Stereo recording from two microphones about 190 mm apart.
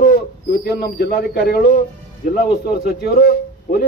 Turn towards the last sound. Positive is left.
turn(degrees=50)  # may be behind; listen again after turning